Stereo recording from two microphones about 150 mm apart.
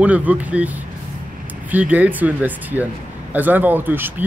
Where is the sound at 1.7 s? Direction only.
10° right (ahead or behind).